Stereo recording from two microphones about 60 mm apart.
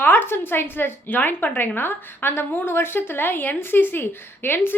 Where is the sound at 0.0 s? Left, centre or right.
Left.